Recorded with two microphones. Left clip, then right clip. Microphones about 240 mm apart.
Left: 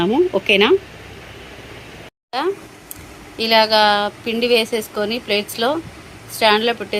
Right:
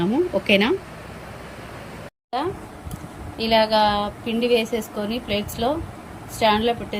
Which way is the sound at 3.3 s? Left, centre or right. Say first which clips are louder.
Left 4 dB; centre.